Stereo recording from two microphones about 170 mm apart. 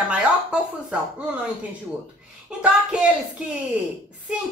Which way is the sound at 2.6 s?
5° right (ahead or behind).